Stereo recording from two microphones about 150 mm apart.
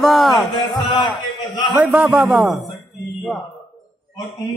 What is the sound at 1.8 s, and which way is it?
Speech, 10° right (ahead or behind).